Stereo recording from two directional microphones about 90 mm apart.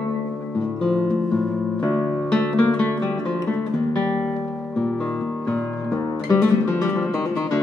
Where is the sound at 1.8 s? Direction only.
25° left (ahead or behind).